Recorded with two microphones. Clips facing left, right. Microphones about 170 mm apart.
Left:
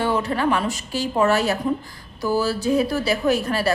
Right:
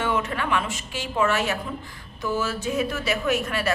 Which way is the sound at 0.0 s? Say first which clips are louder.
Left 5 dB; 35° left (ahead or behind).